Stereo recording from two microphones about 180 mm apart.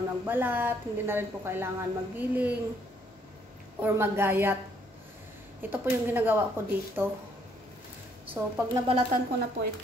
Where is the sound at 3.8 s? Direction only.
10° right (ahead or behind).